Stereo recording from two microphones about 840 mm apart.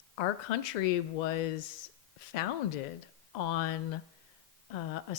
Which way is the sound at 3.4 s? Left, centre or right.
Left.